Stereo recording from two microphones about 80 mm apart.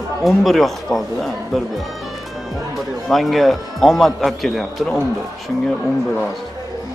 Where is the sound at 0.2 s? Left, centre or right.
Centre.